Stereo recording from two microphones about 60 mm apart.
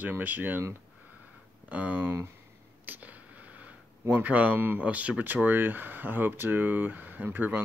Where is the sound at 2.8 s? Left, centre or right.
Right.